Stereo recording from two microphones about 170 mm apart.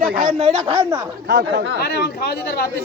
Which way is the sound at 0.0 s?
55° right (ahead or behind).